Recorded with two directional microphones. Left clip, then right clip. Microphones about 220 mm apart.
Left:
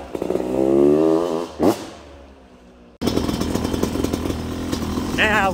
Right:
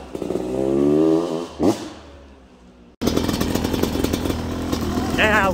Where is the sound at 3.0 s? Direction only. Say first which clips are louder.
Right 1 dB; 10° right (ahead or behind).